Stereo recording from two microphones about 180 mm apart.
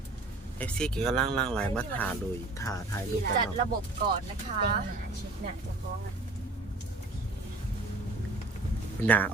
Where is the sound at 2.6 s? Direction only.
15° left (ahead or behind).